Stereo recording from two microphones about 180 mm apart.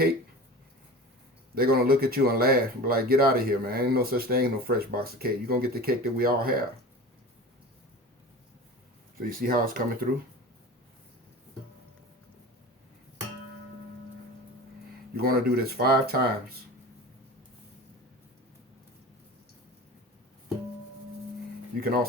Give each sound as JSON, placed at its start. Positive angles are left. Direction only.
{"t": 1.5, "sound": "speech", "side_deg": -60}
{"t": 9.1, "sound": "speech", "side_deg": -50}
{"t": 15.1, "sound": "speech", "side_deg": -60}
{"t": 21.8, "sound": "speech", "side_deg": -55}